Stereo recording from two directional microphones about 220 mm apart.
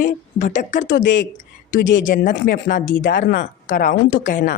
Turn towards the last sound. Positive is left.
turn(degrees=35)  # may be behind; listen again after turning